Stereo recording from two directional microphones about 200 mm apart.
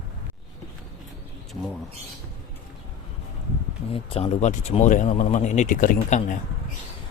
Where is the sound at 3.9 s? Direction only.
30° left (ahead or behind).